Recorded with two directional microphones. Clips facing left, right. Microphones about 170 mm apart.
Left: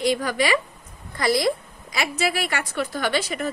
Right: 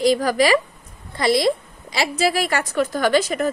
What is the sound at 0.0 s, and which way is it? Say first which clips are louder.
Speech: right 5 dB; 40° right (ahead or behind).